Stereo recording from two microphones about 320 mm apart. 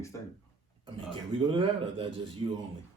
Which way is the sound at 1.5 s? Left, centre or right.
Centre.